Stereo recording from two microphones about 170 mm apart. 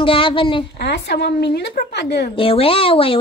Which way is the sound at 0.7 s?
80° left.